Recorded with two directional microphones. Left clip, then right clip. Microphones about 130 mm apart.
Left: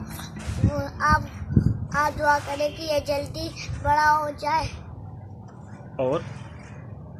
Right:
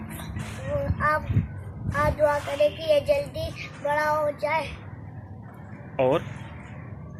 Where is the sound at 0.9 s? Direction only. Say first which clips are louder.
Left 4 dB; 30° left (ahead or behind).